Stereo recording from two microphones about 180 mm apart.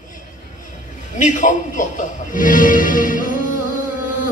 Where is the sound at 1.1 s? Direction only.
45° left (ahead or behind).